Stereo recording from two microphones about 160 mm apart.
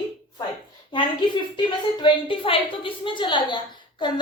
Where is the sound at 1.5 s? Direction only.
30° left (ahead or behind).